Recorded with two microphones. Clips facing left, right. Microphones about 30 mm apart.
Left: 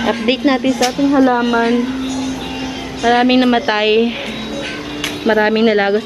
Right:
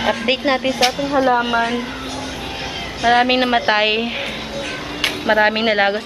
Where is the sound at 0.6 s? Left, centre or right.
Centre.